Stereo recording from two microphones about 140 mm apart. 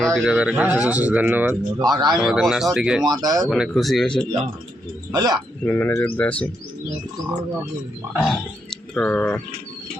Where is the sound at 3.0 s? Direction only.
30° right (ahead or behind).